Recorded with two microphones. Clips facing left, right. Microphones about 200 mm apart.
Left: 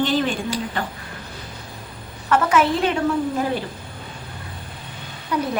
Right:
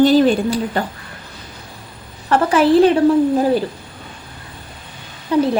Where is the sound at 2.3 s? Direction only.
35° right (ahead or behind).